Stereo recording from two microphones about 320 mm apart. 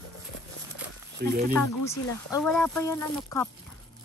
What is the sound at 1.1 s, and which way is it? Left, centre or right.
Speech, right.